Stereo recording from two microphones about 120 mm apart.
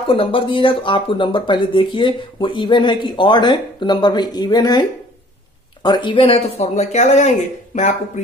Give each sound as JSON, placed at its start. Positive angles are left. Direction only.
{"t": 0.1, "sound": "speech", "side_deg": 50}